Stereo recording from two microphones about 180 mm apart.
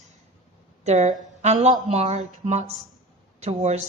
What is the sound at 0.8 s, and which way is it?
Speech, 40° right (ahead or behind).